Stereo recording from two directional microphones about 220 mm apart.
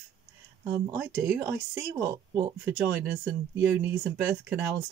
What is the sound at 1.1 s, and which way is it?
Speech, 15° right (ahead or behind).